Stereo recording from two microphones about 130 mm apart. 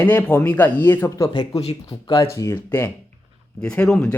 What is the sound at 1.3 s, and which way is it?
A man's voice, 35° left (ahead or behind).